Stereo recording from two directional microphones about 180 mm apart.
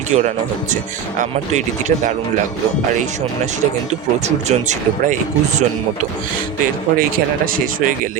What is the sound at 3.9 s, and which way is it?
Speech, 40° right (ahead or behind).